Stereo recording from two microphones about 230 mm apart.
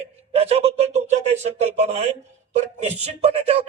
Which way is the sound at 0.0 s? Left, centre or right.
Right.